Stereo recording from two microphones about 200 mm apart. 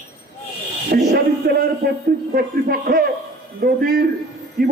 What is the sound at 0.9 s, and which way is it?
A man's voice, 50° right (ahead or behind).